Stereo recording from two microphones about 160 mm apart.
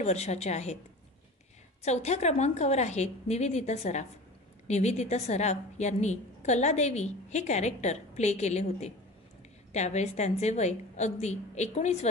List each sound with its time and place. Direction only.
0.0 s a woman's voice: 45° left (ahead or behind)
1.8 s a woman's voice: 40° left (ahead or behind)